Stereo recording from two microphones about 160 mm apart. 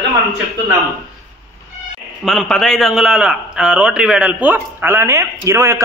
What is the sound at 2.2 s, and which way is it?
A man's voice, centre (ahead or behind).